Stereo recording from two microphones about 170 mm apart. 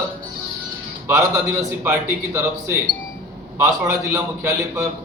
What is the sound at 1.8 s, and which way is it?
A man's voice, 15° right (ahead or behind).